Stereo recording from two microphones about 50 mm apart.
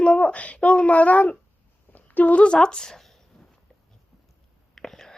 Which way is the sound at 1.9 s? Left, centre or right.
Left.